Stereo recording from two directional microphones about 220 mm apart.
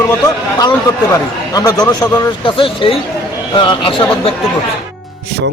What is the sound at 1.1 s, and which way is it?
Speech, 15° left (ahead or behind).